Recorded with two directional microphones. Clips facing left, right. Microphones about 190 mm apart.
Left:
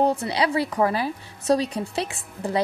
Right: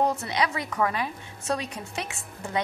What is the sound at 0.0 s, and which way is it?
A woman's voice, 30° left (ahead or behind).